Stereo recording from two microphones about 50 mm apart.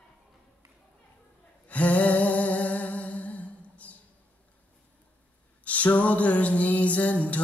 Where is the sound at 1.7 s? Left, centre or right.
Left.